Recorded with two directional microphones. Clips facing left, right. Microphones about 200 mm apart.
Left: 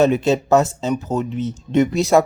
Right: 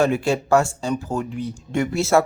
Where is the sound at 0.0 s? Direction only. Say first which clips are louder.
Left 4 dB; 20° left (ahead or behind).